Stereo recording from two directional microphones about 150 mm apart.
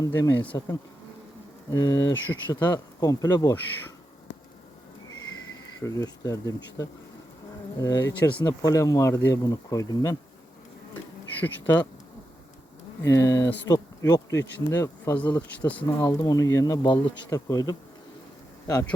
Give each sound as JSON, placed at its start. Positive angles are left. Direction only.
{"t": 0.0, "sound": "bee", "side_deg": 25}
{"t": 1.7, "sound": "bee", "side_deg": 25}
{"t": 5.8, "sound": "bee", "side_deg": 20}
{"t": 11.3, "sound": "speech", "side_deg": 15}
{"t": 13.1, "sound": "bee", "side_deg": 20}